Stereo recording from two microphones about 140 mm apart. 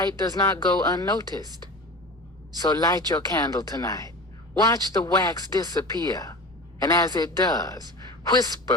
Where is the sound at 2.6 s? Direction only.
25° left (ahead or behind).